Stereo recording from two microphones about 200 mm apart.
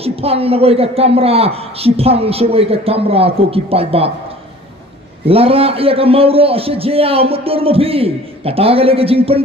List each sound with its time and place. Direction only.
0.0 s a man's voice: 30° right (ahead or behind)
5.2 s a man's voice: 30° right (ahead or behind)